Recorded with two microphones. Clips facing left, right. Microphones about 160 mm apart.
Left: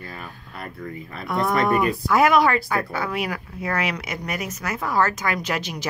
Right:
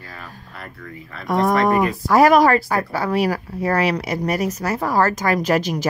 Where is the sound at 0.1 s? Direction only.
20° left (ahead or behind).